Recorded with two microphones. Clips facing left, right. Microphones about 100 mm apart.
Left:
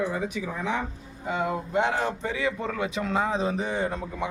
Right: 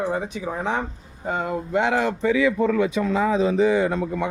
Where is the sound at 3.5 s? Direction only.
90° right.